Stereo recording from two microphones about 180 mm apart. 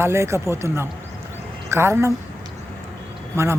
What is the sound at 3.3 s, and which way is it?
Speech, 15° right (ahead or behind).